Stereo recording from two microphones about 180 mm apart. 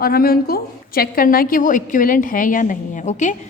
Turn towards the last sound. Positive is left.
turn(degrees=45)  # may be behind; listen again after turning